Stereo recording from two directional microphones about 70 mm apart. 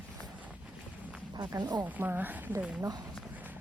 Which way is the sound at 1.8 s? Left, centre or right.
Right.